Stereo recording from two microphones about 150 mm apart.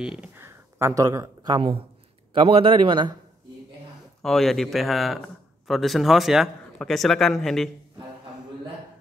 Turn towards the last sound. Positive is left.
turn(degrees=0)  # may be behind; listen again after turning